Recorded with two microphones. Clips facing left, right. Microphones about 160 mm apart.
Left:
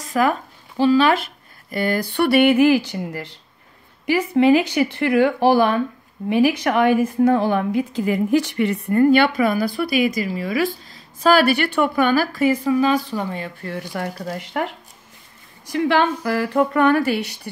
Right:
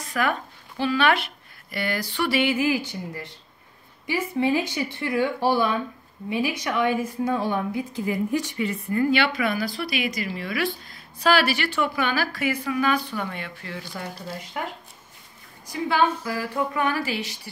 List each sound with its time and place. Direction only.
0.0 s speech: 40° left (ahead or behind); by 3.3 s 85° left
4.0 s a woman's voice: 75° left (ahead or behind); by 12.7 s 45° left (ahead or behind)
12.8 s speech: 35° left (ahead or behind)
13.7 s speech: 60° left (ahead or behind)
15.7 s speech: 80° left; by 17.4 s 55° left (ahead or behind)